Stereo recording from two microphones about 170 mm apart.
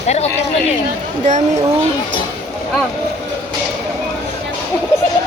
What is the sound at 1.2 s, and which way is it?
Speech, 45° right (ahead or behind).